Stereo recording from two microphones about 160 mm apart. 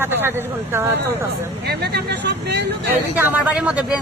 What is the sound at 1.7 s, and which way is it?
Speech, 90° right.